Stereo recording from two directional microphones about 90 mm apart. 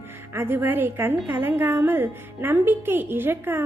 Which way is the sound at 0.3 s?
25° right (ahead or behind).